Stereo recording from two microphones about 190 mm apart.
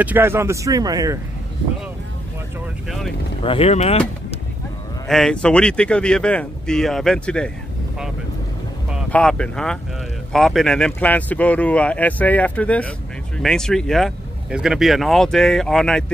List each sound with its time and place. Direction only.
0.0 s speech: 10° right (ahead or behind)
3.4 s speech: 30° left (ahead or behind)
5.0 s speech: 5° left (ahead or behind)
9.1 s speech: 5° left (ahead or behind)